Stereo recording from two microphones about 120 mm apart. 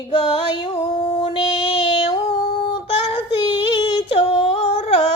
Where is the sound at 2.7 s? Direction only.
50° left (ahead or behind).